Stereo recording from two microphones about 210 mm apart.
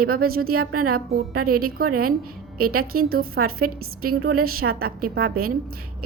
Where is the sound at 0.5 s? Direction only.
90° right.